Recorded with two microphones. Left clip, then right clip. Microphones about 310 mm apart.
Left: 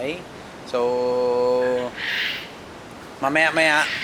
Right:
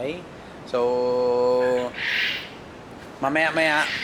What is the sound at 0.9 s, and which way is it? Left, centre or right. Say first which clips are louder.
Mantra: left 1 dB; centre.